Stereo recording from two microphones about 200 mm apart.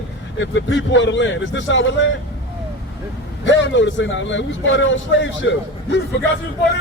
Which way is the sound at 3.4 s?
65° left (ahead or behind).